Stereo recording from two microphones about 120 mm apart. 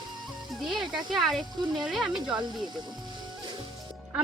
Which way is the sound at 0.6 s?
Centre (ahead or behind).